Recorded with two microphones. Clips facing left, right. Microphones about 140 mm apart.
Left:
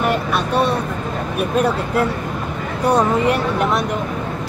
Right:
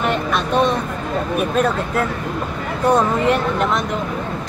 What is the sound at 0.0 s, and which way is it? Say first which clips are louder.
Vehicle: left 1 dB; 10° left (ahead or behind).